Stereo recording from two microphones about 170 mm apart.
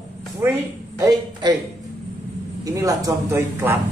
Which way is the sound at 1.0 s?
20° right (ahead or behind).